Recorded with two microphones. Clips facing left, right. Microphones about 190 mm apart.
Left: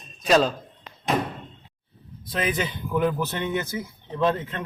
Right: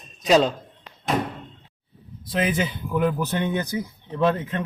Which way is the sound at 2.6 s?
10° right (ahead or behind).